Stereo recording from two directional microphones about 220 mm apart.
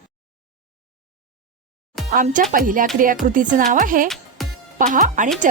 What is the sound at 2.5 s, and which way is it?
A woman's voice, 40° right (ahead or behind).